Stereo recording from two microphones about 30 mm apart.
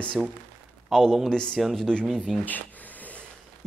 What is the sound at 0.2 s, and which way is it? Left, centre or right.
Speech, centre.